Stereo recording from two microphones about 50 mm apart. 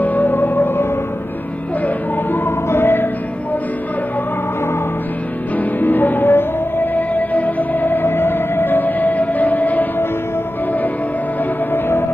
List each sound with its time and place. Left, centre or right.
0.0 s music: left
2.3 s music: left
5.6 s music: left